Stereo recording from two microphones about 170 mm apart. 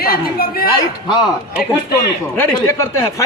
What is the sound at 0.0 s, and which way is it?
Speech, 65° left (ahead or behind).